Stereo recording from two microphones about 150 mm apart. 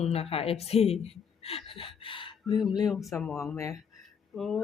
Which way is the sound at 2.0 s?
35° left (ahead or behind).